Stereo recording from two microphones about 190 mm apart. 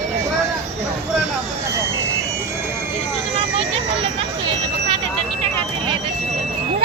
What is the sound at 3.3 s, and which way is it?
Vehicle, 30° right (ahead or behind).